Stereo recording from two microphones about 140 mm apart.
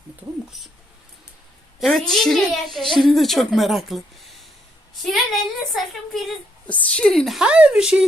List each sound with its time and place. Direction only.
0.5 s speech: centre (ahead or behind)
1.8 s speech: centre (ahead or behind)